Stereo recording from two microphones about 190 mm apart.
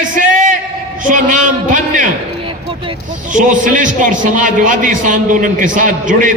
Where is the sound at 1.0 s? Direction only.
45° right (ahead or behind).